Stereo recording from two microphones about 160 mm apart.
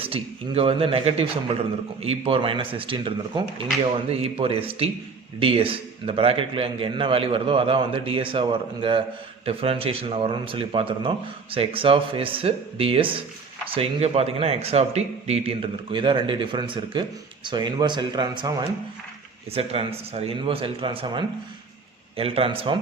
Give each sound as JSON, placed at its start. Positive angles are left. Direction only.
{"t": 0.1, "sound": "a man's voice", "side_deg": -35}